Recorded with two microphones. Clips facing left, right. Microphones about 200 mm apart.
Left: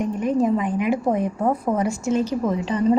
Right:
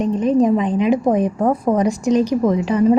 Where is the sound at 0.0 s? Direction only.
20° right (ahead or behind).